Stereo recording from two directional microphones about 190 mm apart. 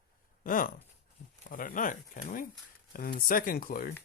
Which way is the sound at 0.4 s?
45° left (ahead or behind).